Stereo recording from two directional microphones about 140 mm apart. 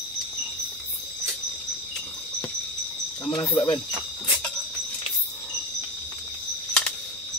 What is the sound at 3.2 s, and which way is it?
Speech, 30° left (ahead or behind).